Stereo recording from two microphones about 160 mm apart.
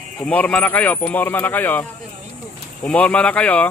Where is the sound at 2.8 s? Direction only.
5° left (ahead or behind).